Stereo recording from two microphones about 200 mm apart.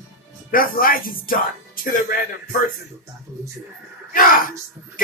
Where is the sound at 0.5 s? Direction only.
45° left (ahead or behind).